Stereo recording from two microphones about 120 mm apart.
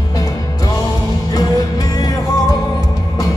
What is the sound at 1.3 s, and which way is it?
Music, 30° left (ahead or behind).